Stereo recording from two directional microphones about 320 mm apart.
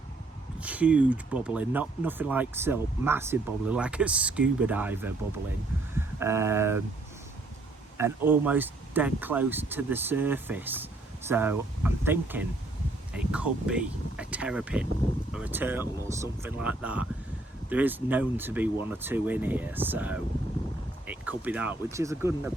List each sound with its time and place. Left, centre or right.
0.6 s speech: centre
7.9 s speech: centre